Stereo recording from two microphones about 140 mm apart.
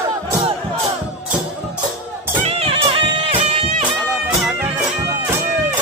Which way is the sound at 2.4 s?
45° right (ahead or behind).